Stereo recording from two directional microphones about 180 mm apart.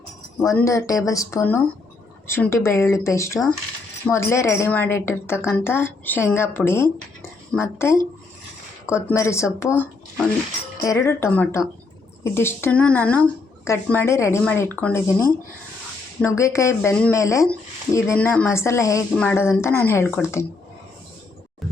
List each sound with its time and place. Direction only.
0.6 s speech: 15° left (ahead or behind)
9.0 s speech: 15° left (ahead or behind)